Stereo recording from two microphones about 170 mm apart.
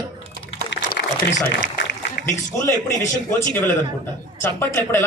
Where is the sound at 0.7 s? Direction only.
90° left.